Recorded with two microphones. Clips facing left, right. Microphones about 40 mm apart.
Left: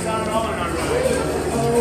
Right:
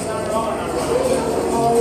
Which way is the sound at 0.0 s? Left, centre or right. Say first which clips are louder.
Even; centre.